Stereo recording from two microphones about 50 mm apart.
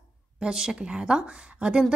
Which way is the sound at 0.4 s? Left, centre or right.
Centre.